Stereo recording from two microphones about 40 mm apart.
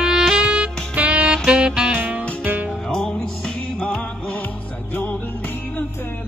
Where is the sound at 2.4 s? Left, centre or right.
Right.